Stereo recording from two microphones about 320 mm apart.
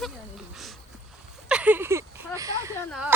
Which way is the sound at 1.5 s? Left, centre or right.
Centre.